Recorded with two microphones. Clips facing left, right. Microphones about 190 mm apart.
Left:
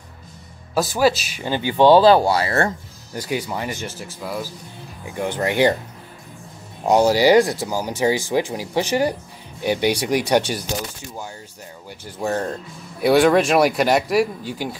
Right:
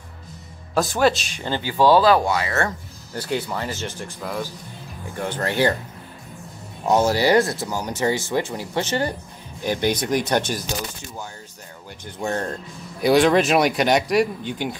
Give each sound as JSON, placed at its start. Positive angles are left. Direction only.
{"t": 0.7, "sound": "speech", "side_deg": 5}
{"t": 3.2, "sound": "speech", "side_deg": 10}
{"t": 7.1, "sound": "speech", "side_deg": 15}
{"t": 12.2, "sound": "speech", "side_deg": 5}